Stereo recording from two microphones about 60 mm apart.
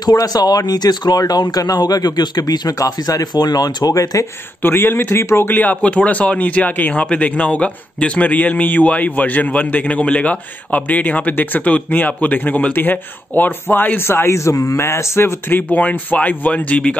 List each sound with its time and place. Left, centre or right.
0.0 s speech: left
4.6 s speech: left
5.6 s speech: left